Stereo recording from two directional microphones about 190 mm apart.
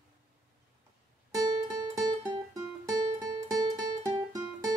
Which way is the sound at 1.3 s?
20° right (ahead or behind).